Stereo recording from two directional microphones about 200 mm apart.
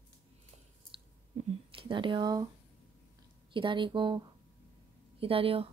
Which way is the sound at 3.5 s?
25° right (ahead or behind).